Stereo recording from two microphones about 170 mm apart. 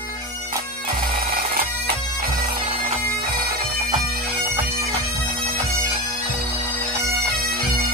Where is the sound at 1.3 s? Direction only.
60° right (ahead or behind).